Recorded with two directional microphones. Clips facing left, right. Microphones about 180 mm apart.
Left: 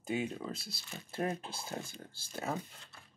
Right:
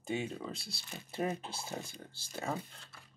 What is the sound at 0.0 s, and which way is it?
Speech, centre (ahead or behind).